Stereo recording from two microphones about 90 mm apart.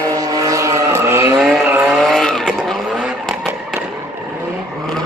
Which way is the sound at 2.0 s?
Centre (ahead or behind).